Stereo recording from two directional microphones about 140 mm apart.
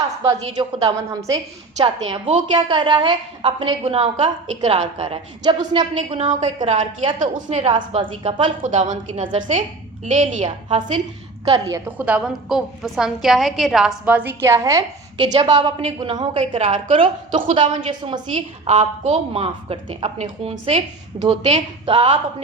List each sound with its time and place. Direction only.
0.5 s a woman's voice: 35° right (ahead or behind)
5.4 s a woman's voice: 30° right (ahead or behind)
7.2 s a woman's voice: 60° right (ahead or behind)
7.7 s a woman's voice: 40° right (ahead or behind)
8.6 s a woman's voice: 60° right (ahead or behind)
11.4 s a woman's voice: 30° right (ahead or behind)
11.9 s a woman's voice: 10° right (ahead or behind)
14.0 s a woman's voice: 10° right (ahead or behind); by 22.2 s 40° right (ahead or behind)